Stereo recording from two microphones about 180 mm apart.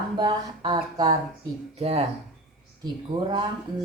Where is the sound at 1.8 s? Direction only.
35° right (ahead or behind).